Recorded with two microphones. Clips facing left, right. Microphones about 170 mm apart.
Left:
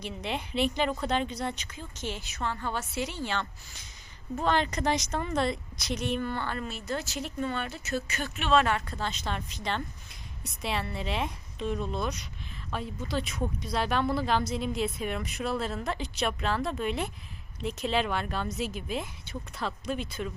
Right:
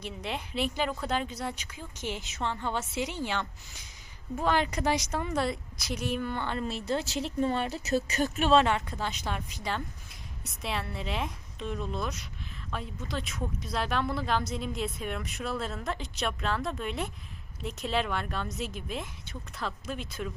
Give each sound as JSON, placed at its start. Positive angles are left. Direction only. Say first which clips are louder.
{"t": 0.0, "sound": "a woman's voice", "louder": "left 2 dB", "side_deg": 0}
{"t": 6.3, "sound": "speech", "louder": "right 1 dB", "side_deg": -20}
{"t": 8.6, "sound": "a woman's voice", "louder": "right 1 dB", "side_deg": -20}